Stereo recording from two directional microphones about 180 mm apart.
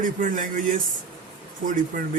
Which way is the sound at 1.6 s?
50° right (ahead or behind).